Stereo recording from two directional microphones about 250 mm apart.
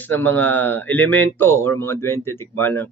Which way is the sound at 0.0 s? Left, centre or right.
Centre.